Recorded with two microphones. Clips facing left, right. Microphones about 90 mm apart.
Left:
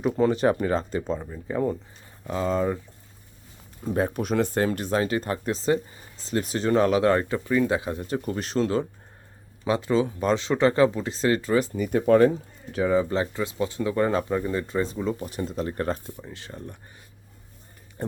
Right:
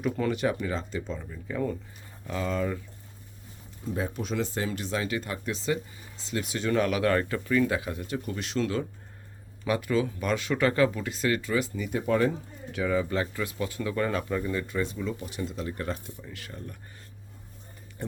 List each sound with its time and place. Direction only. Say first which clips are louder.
0.0 s speech: left 6 dB; 30° left (ahead or behind)
3.8 s speech: left 6 dB; 55° left (ahead or behind)
12.7 s speech: left 5 dB; 30° left (ahead or behind)